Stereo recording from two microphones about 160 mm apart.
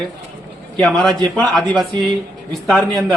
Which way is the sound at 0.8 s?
Centre (ahead or behind).